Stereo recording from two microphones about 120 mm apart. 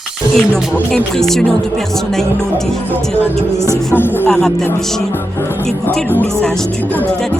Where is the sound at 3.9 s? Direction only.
15° left (ahead or behind).